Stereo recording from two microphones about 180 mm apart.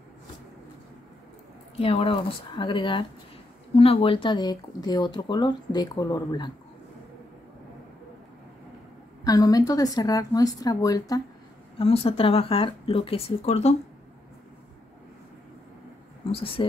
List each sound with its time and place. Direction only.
1.8 s speech: 35° left (ahead or behind)
9.2 s speech: 20° left (ahead or behind)
11.8 s speech: 35° left (ahead or behind)
16.3 s speech: 30° left (ahead or behind)